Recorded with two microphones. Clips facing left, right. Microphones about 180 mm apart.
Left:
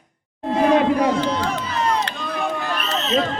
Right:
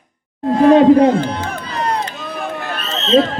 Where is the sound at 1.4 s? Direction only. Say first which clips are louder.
Even; 35° right (ahead or behind).